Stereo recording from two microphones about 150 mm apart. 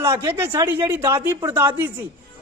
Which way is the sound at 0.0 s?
20° right (ahead or behind).